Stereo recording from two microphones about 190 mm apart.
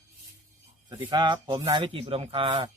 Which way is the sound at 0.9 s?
20° right (ahead or behind).